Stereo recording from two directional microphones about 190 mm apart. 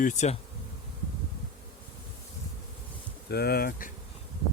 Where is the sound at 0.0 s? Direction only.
40° left (ahead or behind).